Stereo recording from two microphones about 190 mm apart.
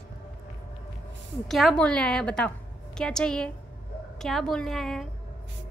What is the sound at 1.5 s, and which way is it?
A woman's voice, centre (ahead or behind).